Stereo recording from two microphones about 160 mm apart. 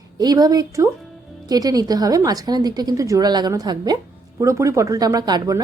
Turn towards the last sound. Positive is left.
turn(degrees=-25)  # may be behind; listen again after turning